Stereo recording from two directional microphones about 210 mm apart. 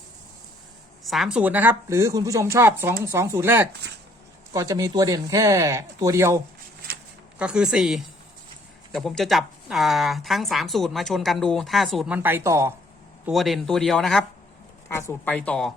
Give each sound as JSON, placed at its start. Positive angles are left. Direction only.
{"t": 1.0, "sound": "speech", "side_deg": 0}
{"t": 13.2, "sound": "speech", "side_deg": 0}